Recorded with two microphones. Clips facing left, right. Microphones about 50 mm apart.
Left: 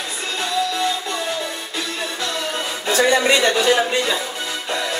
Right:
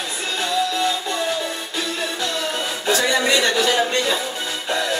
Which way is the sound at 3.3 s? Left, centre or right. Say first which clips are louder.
Left 2 dB; left.